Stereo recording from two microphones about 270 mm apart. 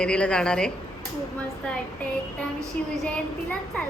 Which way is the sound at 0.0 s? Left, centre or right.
Centre.